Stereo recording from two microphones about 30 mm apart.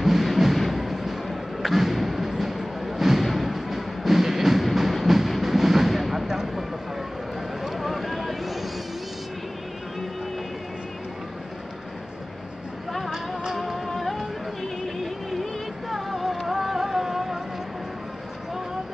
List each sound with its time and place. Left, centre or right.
0.0 s a sound: centre
3.3 s music: centre
6.2 s a sound: centre
7.8 s vehicle: centre
13.1 s music: centre
13.8 s music: centre
15.9 s music: centre